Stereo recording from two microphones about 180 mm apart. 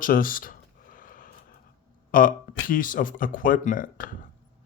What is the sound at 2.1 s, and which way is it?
Speech, 50° left (ahead or behind).